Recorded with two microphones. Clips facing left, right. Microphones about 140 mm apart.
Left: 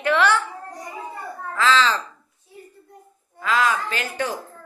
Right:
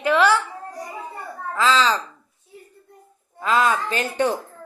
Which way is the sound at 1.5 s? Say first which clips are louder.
Right 1 dB; 15° right (ahead or behind).